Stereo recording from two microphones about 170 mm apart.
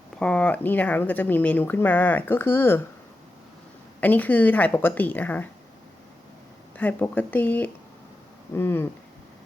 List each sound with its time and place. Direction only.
0.2 s speech: 5° left (ahead or behind)
4.0 s speech: 10° left (ahead or behind)
6.7 s speech: 10° left (ahead or behind)